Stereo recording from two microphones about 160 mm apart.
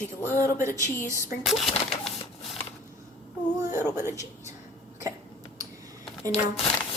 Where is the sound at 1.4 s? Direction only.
Centre (ahead or behind).